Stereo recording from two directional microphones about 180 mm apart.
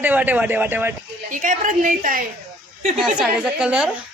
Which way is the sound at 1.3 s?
45° right (ahead or behind).